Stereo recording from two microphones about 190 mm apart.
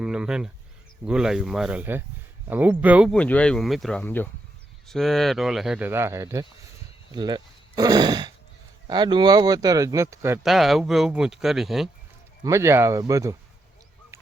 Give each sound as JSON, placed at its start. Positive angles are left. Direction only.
{"t": 0.0, "sound": "speech", "side_deg": -5}
{"t": 3.1, "sound": "speech", "side_deg": 5}
{"t": 10.4, "sound": "speech", "side_deg": 0}
{"t": 12.4, "sound": "speech", "side_deg": -15}